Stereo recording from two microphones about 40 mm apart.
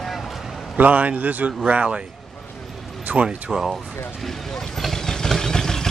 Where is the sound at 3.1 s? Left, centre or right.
Right.